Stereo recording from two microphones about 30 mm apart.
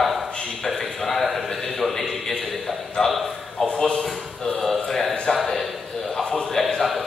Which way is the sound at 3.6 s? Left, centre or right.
Left.